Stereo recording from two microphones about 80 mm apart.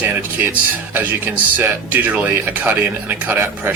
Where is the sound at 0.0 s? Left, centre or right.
Right.